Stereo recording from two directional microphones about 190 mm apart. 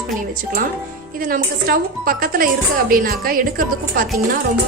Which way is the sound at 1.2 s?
50° right (ahead or behind).